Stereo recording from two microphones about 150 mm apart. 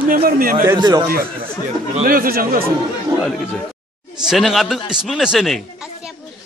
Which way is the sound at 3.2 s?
5° left (ahead or behind).